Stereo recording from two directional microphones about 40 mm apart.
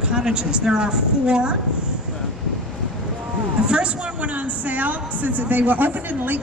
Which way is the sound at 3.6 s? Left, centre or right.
Right.